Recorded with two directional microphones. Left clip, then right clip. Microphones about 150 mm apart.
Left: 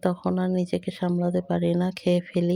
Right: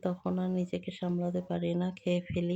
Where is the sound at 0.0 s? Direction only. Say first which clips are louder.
Left 8 dB; 45° left (ahead or behind).